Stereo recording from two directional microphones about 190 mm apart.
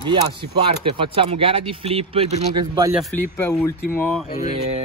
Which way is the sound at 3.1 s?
10° left (ahead or behind).